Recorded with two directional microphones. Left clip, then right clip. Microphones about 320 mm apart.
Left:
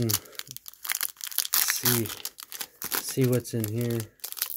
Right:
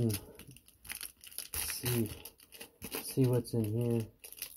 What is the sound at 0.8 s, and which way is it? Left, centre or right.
Crumpling, left.